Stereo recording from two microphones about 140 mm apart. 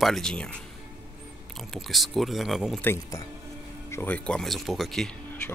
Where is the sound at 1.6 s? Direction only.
Centre (ahead or behind).